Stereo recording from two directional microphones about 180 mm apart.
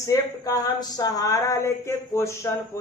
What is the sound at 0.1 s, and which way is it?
Speech, 20° left (ahead or behind).